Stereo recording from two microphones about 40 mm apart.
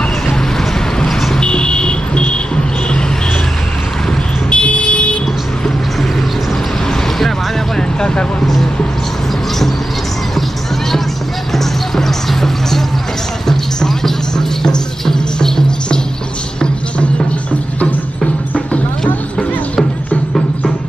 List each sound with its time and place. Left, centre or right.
0.6 s a sound: centre
1.4 s vehicle: left
4.5 s vehicle: left
6.9 s vehicle: centre
8.1 s speech: left
11.5 s music: centre